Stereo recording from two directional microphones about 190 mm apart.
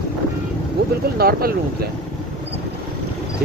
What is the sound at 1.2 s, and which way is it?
Speech, 50° right (ahead or behind).